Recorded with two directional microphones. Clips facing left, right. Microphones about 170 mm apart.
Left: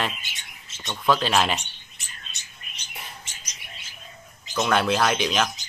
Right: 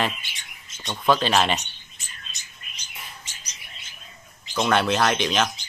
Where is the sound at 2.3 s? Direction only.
65° left (ahead or behind).